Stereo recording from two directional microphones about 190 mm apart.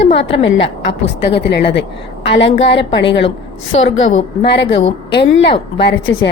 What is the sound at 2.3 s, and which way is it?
A woman's voice, 75° left (ahead or behind).